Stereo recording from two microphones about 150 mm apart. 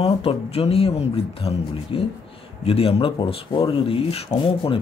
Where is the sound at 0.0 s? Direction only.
40° left (ahead or behind).